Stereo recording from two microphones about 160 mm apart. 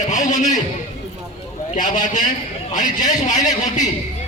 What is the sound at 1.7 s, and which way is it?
Speech, 50° left (ahead or behind).